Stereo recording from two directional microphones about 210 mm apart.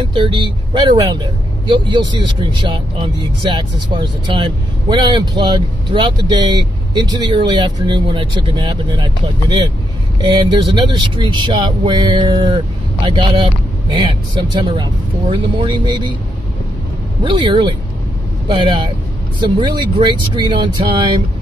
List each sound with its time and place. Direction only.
0.0 s speech: 20° right (ahead or behind)
17.2 s speech: 20° right (ahead or behind)